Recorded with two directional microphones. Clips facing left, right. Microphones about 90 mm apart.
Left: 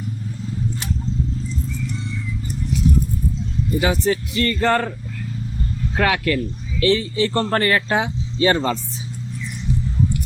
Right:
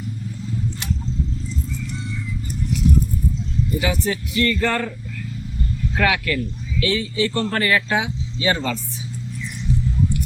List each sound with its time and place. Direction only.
3.8 s speech: 35° left (ahead or behind)
6.0 s speech: 35° left (ahead or behind)